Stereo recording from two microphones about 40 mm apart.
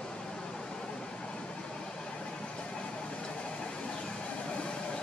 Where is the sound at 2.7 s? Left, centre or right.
Left.